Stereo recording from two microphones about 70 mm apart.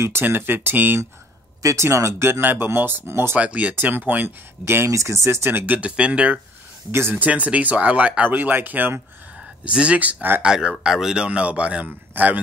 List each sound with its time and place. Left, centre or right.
0.0 s speech: right
1.6 s speech: right
2.4 s speech: right
3.3 s speech: centre
3.7 s speech: right
4.8 s speech: right
5.8 s speech: centre
6.9 s speech: right
7.2 s speech: right
10.4 s speech: centre